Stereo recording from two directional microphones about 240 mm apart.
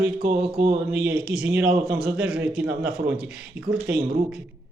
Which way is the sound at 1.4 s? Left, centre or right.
Centre.